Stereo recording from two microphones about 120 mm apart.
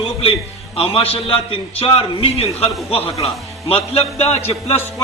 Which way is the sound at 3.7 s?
55° left (ahead or behind).